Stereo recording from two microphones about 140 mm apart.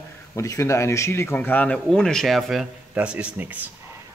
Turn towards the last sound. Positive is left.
turn(degrees=-10)  # may be behind; listen again after turning